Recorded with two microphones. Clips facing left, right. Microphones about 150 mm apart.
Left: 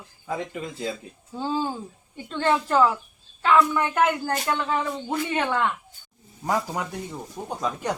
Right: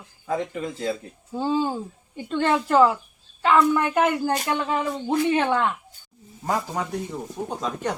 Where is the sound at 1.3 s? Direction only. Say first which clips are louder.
Right 4 dB; 10° right (ahead or behind).